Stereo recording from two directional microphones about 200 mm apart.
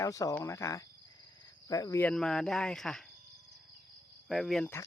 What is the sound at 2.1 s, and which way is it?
Speech, 5° left (ahead or behind).